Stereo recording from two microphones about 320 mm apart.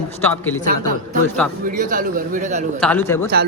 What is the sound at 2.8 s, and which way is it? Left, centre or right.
Speech, centre.